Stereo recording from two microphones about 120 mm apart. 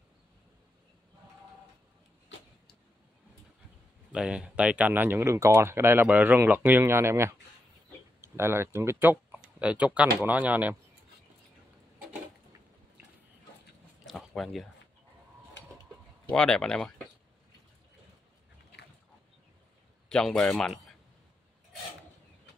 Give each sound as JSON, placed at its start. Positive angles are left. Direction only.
{"t": 4.1, "sound": "speech", "side_deg": -5}
{"t": 14.0, "sound": "a sound", "side_deg": 0}
{"t": 16.3, "sound": "speech", "side_deg": 5}
{"t": 20.1, "sound": "speech", "side_deg": 5}